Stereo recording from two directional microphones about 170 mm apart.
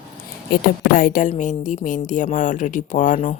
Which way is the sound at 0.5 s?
55° left (ahead or behind).